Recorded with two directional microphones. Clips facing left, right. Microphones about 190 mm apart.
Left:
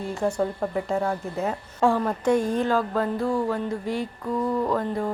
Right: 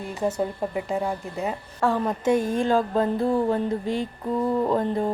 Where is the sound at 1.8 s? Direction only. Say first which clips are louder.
Left 2 dB; 15° left (ahead or behind).